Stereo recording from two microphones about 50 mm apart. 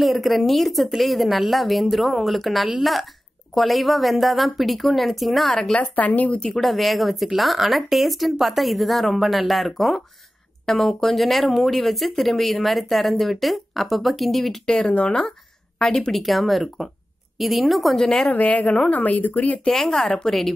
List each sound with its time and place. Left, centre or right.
0.0 s speech: centre
5.8 s a woman's voice: left
6.4 s speech: centre
14.9 s a woman's voice: left
16.1 s a woman's voice: centre
18.3 s a woman's voice: left
19.7 s speech: centre